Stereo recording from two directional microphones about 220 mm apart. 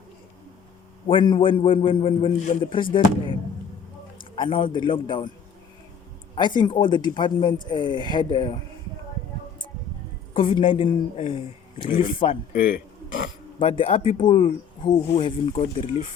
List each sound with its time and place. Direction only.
1.0 s a man's voice: 20° left (ahead or behind)
6.3 s speech: 20° left (ahead or behind)
10.3 s speech: 25° left (ahead or behind)
13.6 s speech: 25° left (ahead or behind)